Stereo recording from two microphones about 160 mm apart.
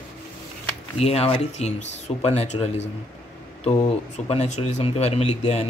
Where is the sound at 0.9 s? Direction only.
40° left (ahead or behind).